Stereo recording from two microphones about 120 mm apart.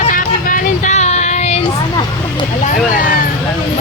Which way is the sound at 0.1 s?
85° left.